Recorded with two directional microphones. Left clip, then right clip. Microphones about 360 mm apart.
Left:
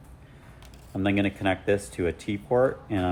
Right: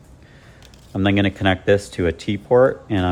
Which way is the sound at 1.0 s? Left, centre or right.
Right.